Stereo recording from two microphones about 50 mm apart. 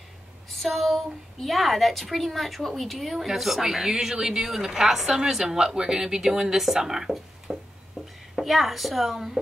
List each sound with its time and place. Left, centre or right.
0.5 s a woman's voice: centre
8.0 s a sound: centre
8.4 s a woman's voice: centre